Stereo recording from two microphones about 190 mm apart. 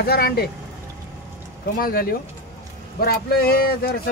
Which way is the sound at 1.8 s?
50° left (ahead or behind).